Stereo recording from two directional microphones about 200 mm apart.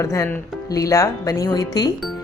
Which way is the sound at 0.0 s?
15° left (ahead or behind).